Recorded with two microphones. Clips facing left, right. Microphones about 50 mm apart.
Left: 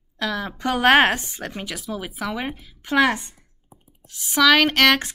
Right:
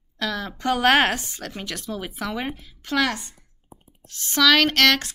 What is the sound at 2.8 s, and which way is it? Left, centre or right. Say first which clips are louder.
Speech: left 4 dB; left.